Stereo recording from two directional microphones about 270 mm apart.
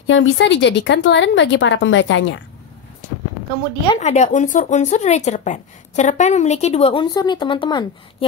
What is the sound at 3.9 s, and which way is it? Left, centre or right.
Speech, left.